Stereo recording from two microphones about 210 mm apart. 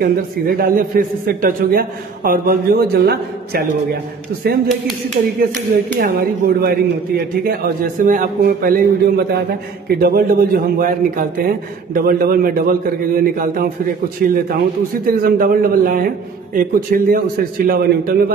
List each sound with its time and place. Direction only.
0.0 s a man's voice: 45° right (ahead or behind)
5.9 s a man's voice: 45° right (ahead or behind)